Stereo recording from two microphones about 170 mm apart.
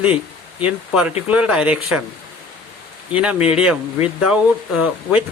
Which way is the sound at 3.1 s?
5° right (ahead or behind).